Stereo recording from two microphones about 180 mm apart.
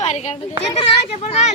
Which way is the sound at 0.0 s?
40° left (ahead or behind).